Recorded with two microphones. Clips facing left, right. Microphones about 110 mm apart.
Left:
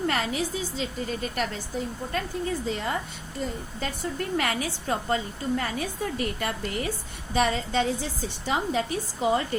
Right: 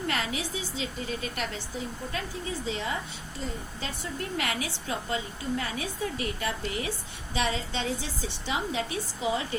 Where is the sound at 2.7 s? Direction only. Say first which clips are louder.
Left 2 dB; 50° left (ahead or behind).